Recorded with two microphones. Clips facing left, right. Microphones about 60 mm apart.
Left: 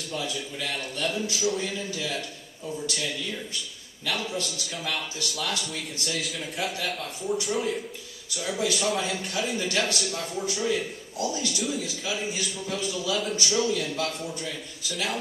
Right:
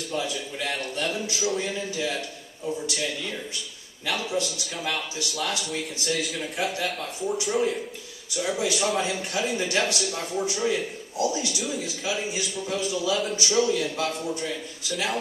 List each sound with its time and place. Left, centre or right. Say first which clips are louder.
1.3 s speech: even; centre
1.6 s speech: right 3 dB; right
4.0 s a man's voice: right 3 dB; centre
8.4 s a man's voice: right 2 dB; centre
11.6 s speech: right 1 dB; centre
12.3 s a man's voice: right 2 dB; centre
13.4 s a man's voice: right 3 dB; centre